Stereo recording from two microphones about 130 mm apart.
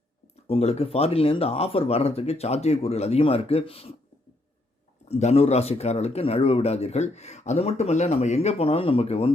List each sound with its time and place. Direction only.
0.4 s speech: 50° left (ahead or behind)
5.0 s speech: 55° left (ahead or behind)